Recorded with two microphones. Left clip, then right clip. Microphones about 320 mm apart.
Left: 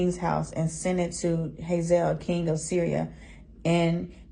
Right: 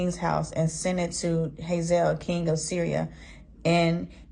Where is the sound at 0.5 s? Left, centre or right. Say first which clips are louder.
Right 1 dB; right.